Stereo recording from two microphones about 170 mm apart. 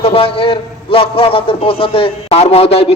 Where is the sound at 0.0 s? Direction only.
35° left (ahead or behind).